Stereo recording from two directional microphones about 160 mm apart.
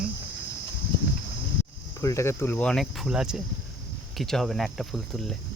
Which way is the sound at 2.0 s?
20° left (ahead or behind).